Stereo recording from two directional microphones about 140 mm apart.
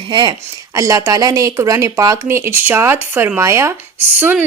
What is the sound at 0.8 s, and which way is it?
Speech, 25° right (ahead or behind).